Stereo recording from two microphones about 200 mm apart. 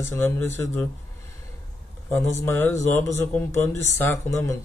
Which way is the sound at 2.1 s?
10° left (ahead or behind).